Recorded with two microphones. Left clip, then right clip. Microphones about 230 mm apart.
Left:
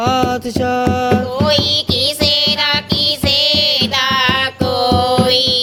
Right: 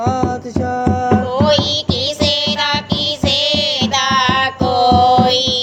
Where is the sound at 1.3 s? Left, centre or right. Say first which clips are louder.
Even; left.